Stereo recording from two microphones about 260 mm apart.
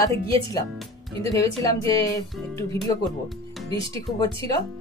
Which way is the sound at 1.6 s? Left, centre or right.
Centre.